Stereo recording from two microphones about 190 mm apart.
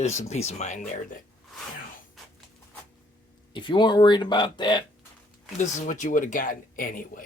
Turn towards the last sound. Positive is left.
turn(degrees=45)  # may be behind; listen again after turning